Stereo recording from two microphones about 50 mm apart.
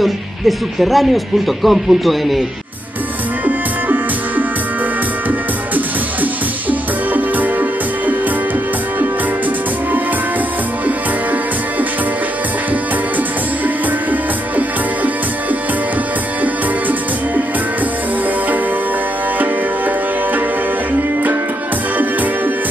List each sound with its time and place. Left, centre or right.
0.0 s speech: centre
3.4 s music: right
6.7 s music: right